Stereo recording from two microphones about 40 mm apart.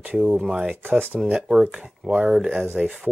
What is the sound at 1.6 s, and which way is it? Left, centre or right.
Speech, right.